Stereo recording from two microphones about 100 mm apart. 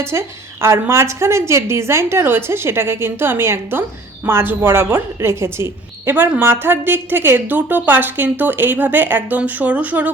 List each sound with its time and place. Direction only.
0.0 s a woman's voice: 25° right (ahead or behind)